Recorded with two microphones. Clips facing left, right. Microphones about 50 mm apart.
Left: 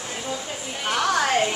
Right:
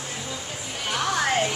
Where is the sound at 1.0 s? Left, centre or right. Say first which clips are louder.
Left 3 dB; left.